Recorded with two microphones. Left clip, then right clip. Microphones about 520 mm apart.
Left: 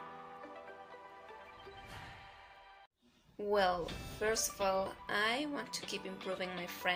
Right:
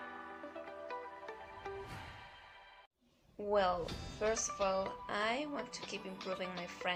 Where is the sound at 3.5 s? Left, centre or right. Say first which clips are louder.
Left 1 dB; right.